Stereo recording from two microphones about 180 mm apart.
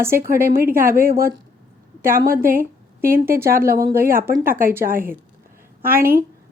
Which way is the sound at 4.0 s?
55° right (ahead or behind).